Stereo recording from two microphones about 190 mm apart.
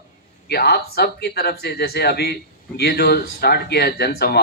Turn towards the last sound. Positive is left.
turn(degrees=55)  # may be behind; listen again after turning